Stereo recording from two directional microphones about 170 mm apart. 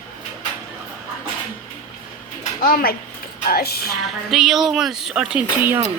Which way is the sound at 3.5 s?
65° left (ahead or behind).